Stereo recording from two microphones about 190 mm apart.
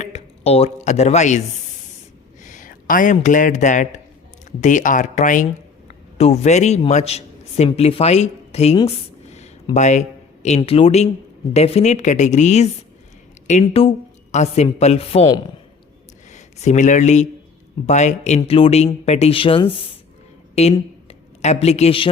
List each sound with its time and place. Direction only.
0.0 s chopping: 35° left (ahead or behind)
2.4 s a woman's voice: 40° left (ahead or behind)
8.9 s a sound: 35° left (ahead or behind)
9.7 s a man's voice: 40° left (ahead or behind)
16.3 s a woman's voice: 40° left (ahead or behind)